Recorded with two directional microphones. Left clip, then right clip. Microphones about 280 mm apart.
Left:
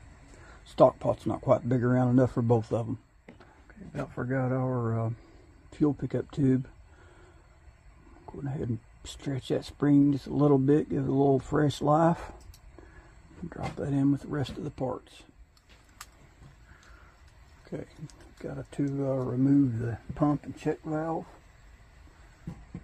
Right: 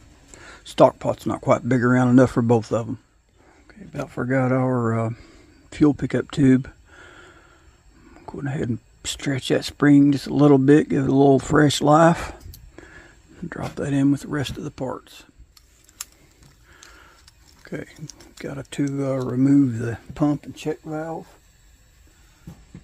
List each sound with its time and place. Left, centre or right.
0.5 s speech: right
2.0 s speech: right
3.9 s speech: right
8.3 s speech: right
13.5 s speech: right
17.6 s speech: right